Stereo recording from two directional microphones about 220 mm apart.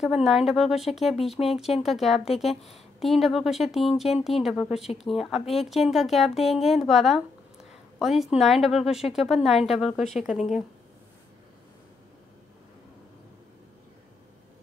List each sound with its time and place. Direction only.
0.0 s a woman's voice: centre (ahead or behind)